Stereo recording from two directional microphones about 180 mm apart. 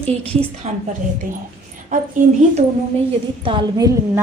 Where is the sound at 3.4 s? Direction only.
25° right (ahead or behind).